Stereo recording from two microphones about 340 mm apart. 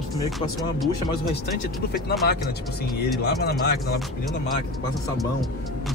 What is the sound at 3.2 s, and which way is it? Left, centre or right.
Speech, left.